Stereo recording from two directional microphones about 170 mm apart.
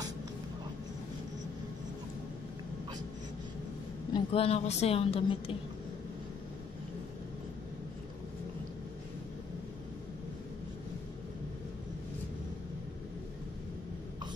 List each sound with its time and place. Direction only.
4.1 s a woman's voice: 35° left (ahead or behind)